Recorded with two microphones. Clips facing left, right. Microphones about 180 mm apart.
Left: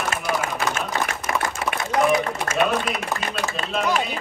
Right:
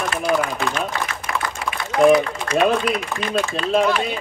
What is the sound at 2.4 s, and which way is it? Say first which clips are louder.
Speech: right 4 dB; 45° left (ahead or behind).